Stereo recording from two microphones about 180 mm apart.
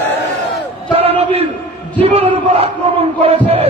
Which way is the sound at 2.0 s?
35° right (ahead or behind).